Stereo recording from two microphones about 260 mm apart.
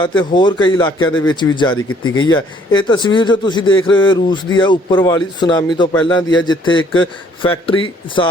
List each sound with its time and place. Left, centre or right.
0.0 s a man's voice: centre
1.7 s speech: left
2.2 s a man's voice: centre